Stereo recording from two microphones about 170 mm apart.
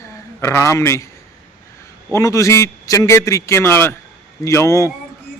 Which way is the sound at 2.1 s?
20° left (ahead or behind).